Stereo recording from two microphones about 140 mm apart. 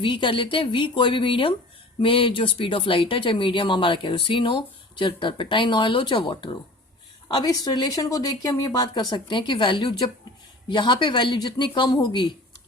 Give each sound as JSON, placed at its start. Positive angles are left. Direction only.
{"t": 0.0, "sound": "speech", "side_deg": 35}